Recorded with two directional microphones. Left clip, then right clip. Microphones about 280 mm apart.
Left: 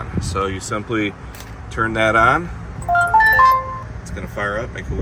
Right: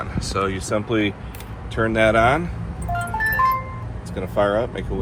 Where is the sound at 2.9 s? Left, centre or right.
Centre.